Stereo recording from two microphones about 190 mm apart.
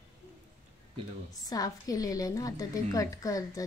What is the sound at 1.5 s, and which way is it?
A woman's voice, 20° left (ahead or behind).